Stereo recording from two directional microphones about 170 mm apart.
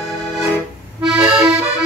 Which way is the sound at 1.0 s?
5° right (ahead or behind).